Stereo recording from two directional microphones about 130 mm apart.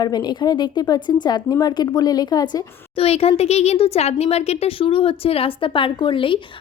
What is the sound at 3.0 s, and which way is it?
Speech, 50° left (ahead or behind).